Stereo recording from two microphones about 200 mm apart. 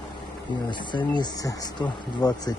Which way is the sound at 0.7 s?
25° left (ahead or behind).